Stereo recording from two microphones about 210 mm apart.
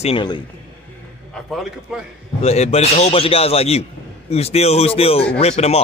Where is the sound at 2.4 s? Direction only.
30° left (ahead or behind).